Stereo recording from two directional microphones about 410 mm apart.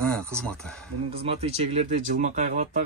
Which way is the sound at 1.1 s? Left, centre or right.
Centre.